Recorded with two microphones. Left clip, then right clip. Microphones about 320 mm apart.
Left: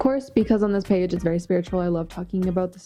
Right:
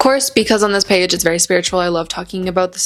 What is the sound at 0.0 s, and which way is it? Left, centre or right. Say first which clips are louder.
Speech: right 9 dB; centre.